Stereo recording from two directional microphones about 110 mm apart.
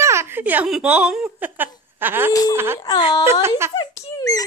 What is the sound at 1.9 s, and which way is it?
Speech, 20° right (ahead or behind).